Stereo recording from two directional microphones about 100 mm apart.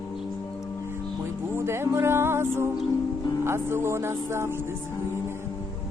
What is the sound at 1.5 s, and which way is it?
Music, 25° right (ahead or behind).